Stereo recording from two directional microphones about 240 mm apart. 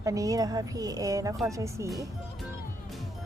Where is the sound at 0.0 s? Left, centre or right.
Centre.